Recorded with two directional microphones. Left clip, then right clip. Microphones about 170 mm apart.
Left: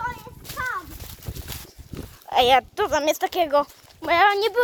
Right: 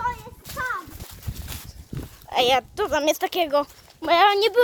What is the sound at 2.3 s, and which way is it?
Speech, 10° left (ahead or behind).